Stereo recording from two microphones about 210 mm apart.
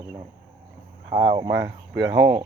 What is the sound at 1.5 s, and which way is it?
Speech, 60° right (ahead or behind).